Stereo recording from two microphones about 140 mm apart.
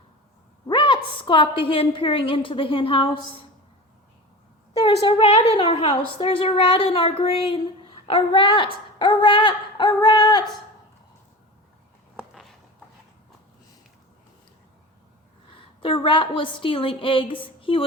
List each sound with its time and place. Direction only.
0.7 s a woman's voice: 35° left (ahead or behind)
4.7 s a woman's voice: 45° left (ahead or behind)
12.1 s a sound: centre (ahead or behind)
15.5 s a woman's voice: 40° left (ahead or behind)